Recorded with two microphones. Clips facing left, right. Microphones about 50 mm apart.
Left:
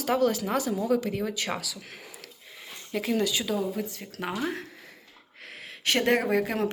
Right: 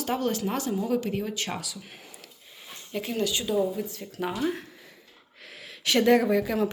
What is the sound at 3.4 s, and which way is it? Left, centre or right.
Speech, left.